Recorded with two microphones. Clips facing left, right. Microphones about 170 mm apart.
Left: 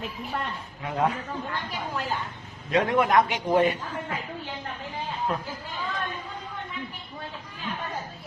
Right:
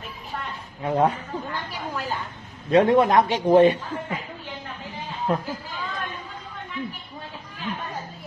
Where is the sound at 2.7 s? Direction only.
30° right (ahead or behind).